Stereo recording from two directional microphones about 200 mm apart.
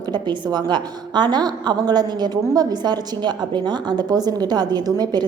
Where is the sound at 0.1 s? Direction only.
20° right (ahead or behind).